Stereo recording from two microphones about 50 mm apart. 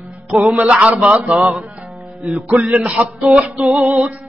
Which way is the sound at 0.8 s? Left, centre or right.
Right.